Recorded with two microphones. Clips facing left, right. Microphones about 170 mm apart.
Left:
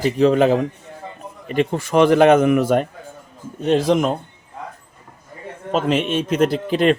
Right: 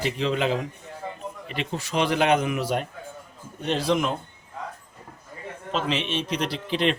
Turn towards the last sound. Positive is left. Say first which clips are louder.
# left 8 dB
turn(degrees=45)  # may be behind; listen again after turning